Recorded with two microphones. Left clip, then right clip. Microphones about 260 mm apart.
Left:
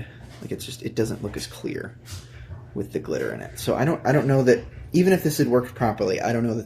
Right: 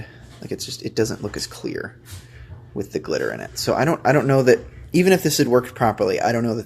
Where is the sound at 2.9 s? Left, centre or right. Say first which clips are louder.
Right 4 dB; centre.